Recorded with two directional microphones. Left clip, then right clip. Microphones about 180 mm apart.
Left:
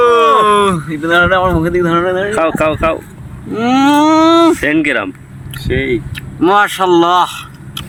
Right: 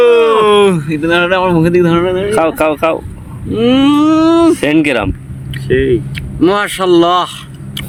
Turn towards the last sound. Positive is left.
turn(degrees=-10)  # may be behind; listen again after turning